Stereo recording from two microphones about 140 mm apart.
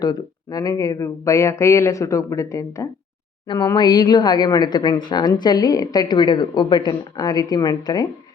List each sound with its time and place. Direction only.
0.0 s a woman's voice: 25° left (ahead or behind)